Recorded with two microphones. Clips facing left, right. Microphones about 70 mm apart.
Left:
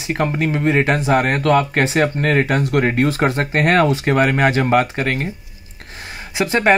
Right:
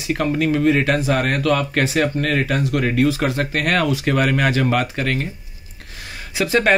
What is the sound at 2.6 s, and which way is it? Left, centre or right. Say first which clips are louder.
Speech: left 2 dB; left.